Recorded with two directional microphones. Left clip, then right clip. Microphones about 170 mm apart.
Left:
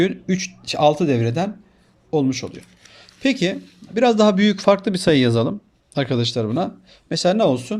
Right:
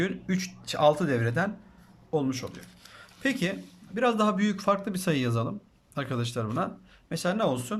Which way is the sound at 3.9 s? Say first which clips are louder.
Left 10 dB; 25° left (ahead or behind).